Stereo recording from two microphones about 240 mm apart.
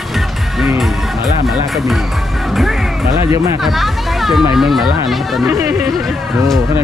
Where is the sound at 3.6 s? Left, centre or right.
Centre.